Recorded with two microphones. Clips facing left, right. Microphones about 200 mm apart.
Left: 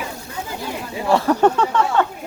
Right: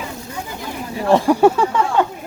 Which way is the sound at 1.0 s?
15° right (ahead or behind).